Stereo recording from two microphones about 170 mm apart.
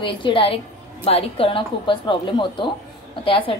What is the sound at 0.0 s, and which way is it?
A woman's voice, 30° left (ahead or behind).